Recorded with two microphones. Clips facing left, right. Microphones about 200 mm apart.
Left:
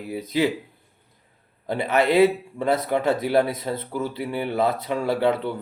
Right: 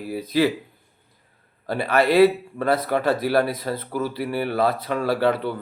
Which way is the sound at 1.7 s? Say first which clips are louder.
Right 1 dB; 20° left (ahead or behind).